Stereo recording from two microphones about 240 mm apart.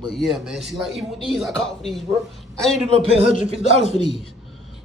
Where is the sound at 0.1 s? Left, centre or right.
Centre.